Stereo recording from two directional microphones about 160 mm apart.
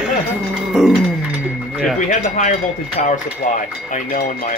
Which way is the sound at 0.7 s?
5° right (ahead or behind).